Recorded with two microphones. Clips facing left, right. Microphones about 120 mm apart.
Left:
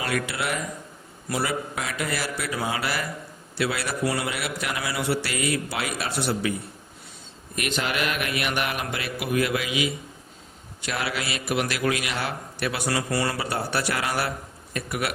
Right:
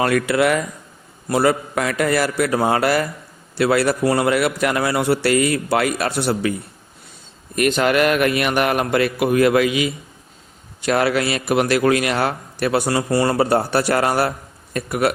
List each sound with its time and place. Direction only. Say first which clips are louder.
0.0 s speech: right 11 dB; 55° right (ahead or behind)
1.3 s a man's voice: right 10 dB; 55° right (ahead or behind)
7.5 s a man's voice: right 11 dB; 50° right (ahead or behind)